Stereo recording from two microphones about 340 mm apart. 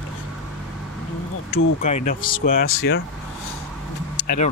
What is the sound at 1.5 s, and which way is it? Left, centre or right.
Speech, left.